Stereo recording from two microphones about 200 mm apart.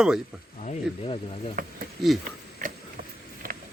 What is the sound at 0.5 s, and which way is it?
Speech, 35° left (ahead or behind).